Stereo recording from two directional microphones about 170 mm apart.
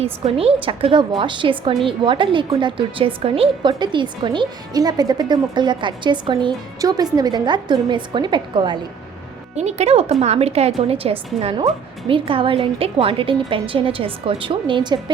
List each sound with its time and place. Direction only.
0.0 s a woman's voice: 35° right (ahead or behind)
9.6 s a woman's voice: 40° right (ahead or behind)